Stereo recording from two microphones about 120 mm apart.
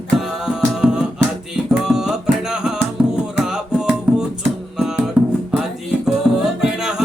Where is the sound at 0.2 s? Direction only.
5° right (ahead or behind).